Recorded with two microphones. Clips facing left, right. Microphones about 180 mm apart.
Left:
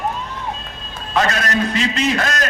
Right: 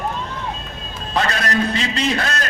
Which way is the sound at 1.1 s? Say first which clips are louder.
Left 2 dB; 35° right (ahead or behind).